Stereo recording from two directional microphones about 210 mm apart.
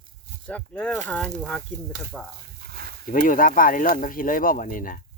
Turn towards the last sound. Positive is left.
turn(degrees=40)  # may be behind; listen again after turning